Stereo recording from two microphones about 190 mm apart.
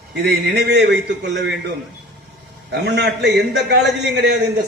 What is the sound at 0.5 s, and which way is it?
A man's voice, 60° right (ahead or behind).